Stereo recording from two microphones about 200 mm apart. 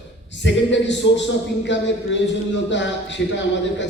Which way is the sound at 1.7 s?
65° left (ahead or behind).